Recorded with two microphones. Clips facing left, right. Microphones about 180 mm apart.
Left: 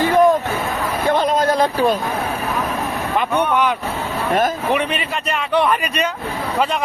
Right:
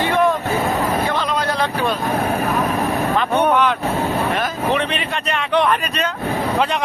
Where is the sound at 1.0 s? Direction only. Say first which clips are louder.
Left 4 dB; 50° left (ahead or behind).